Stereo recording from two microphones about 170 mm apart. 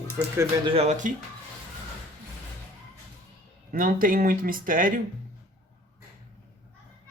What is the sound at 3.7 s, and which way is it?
Speech, 55° right (ahead or behind).